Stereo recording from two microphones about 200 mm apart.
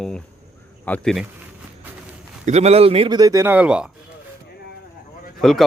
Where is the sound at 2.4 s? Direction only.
35° right (ahead or behind); by 3.9 s 5° right (ahead or behind).